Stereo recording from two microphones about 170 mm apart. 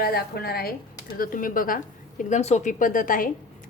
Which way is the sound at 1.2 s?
55° left (ahead or behind).